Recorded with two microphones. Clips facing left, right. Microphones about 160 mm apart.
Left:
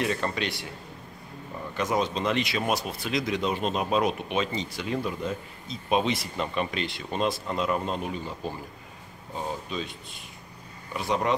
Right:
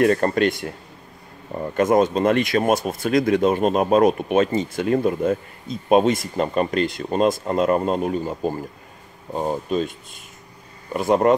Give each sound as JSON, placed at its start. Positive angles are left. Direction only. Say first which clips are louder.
{"t": 0.0, "sound": "speech", "louder": "right 11 dB", "side_deg": -50}
{"t": 1.7, "sound": "speech", "louder": "right 10 dB", "side_deg": -50}